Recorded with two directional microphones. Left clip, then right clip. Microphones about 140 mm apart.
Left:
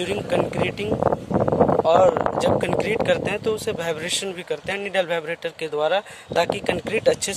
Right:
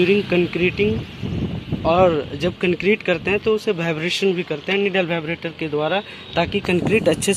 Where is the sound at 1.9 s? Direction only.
65° left (ahead or behind).